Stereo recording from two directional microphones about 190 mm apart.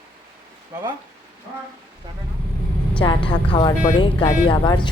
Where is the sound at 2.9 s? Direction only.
25° left (ahead or behind).